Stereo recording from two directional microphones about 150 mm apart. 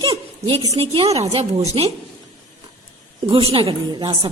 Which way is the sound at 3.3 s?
35° right (ahead or behind).